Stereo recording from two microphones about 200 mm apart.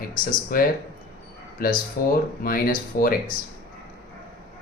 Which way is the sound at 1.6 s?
45° left (ahead or behind).